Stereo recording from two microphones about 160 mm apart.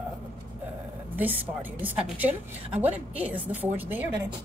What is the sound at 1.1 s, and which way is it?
A woman's voice, 10° right (ahead or behind).